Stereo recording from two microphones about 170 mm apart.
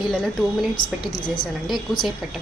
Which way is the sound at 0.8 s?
25° left (ahead or behind).